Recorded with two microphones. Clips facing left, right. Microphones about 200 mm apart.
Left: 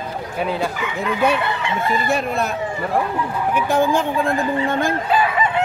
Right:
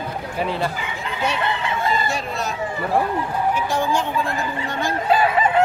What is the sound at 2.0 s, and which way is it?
Speech, 55° left (ahead or behind).